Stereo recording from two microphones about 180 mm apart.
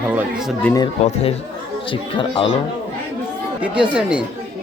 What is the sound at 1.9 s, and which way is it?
Speech, 30° left (ahead or behind).